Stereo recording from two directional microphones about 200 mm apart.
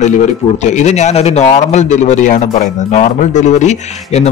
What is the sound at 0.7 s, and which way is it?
Speech, 35° left (ahead or behind).